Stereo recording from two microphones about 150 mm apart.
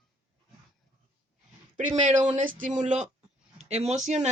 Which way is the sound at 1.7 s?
55° right (ahead or behind).